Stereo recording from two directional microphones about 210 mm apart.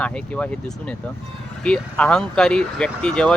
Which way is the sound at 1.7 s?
5° left (ahead or behind).